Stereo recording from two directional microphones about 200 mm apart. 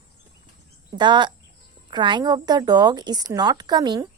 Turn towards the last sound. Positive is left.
turn(degrees=-20)  # may be behind; listen again after turning